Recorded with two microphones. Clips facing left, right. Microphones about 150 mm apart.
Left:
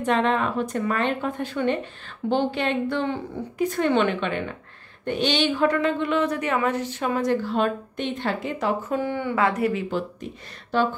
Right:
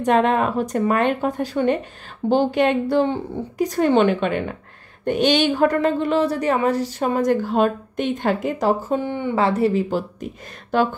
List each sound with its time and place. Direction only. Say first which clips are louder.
0.0 s a woman's voice: right 4 dB; 45° right (ahead or behind)
8.9 s speech: right 3 dB; 20° right (ahead or behind); by 10.0 s 35° right (ahead or behind)